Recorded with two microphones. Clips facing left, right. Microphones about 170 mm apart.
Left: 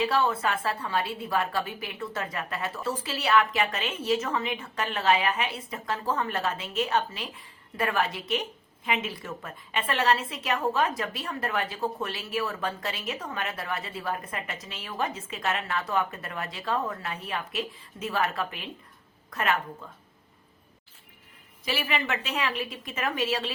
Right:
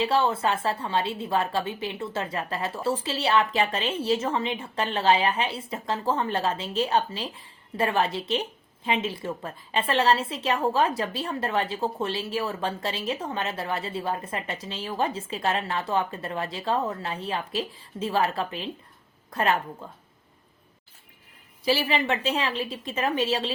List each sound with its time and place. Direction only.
0.0 s a woman's voice: 25° right (ahead or behind)
21.6 s a woman's voice: 30° right (ahead or behind)